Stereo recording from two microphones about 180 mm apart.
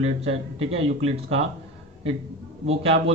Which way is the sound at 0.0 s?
35° right (ahead or behind).